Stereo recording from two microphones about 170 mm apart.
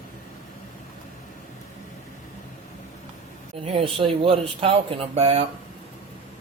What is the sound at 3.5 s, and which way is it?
Speech, 35° right (ahead or behind).